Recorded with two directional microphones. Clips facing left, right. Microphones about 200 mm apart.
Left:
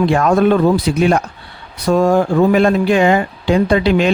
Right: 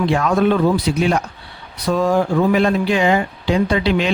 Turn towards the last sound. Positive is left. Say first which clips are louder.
# left 4 dB
turn(degrees=50)  # may be behind; listen again after turning